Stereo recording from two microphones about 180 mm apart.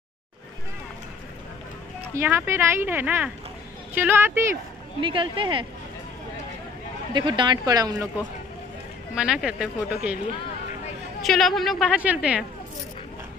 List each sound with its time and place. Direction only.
2.1 s speech: 10° right (ahead or behind)
5.0 s speech: 30° right (ahead or behind)
7.2 s speech: 25° right (ahead or behind)
9.1 s a woman's voice: 5° right (ahead or behind)
11.2 s a woman's voice: centre (ahead or behind)